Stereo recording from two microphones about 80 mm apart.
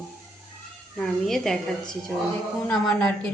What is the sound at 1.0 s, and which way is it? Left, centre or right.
Speech, centre.